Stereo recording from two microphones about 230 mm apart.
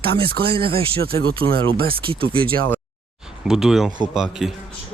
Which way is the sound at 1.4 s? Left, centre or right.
Right.